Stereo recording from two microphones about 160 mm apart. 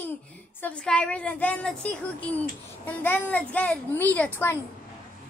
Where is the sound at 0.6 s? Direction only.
5° left (ahead or behind).